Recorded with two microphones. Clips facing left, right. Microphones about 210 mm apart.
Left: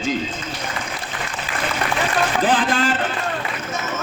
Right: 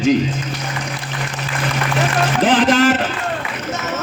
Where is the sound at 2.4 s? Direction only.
90° right.